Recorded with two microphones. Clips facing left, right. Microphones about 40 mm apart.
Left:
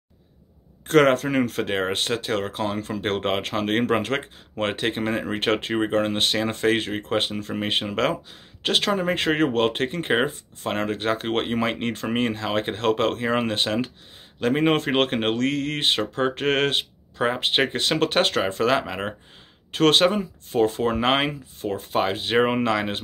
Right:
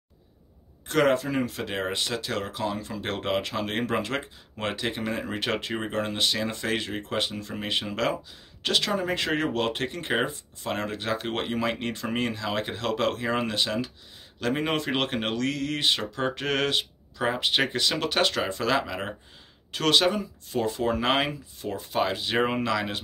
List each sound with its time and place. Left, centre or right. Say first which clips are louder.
0.8 s speech: left 5 dB; left
14.4 s speech: left 6 dB; left
14.7 s speech: left 6 dB; left
18.8 s speech: left 2 dB; left
19.7 s speech: left 5 dB; left